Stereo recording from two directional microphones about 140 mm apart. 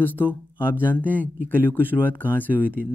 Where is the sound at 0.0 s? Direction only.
15° left (ahead or behind).